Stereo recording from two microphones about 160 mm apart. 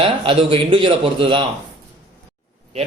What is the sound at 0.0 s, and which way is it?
A man's voice, 35° right (ahead or behind).